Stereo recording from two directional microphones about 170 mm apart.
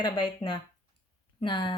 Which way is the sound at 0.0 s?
30° left (ahead or behind).